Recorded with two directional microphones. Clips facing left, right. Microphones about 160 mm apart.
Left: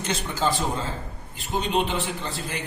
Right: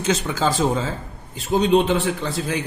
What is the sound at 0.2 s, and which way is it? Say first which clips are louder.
A man's voice: right 5 dB; 90° right.